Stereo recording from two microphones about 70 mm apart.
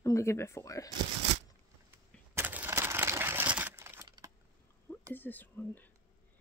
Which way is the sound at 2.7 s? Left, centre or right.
Right.